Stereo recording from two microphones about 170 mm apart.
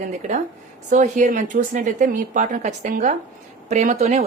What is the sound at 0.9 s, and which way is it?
Speech, 45° right (ahead or behind).